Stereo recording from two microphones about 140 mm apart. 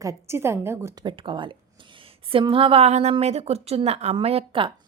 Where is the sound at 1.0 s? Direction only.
35° right (ahead or behind).